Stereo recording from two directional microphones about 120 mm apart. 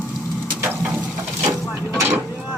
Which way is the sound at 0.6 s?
15° right (ahead or behind).